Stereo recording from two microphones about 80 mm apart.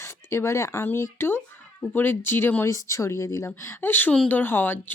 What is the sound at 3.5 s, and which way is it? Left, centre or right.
Speech, left.